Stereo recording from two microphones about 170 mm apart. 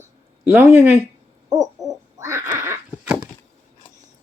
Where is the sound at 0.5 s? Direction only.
15° right (ahead or behind).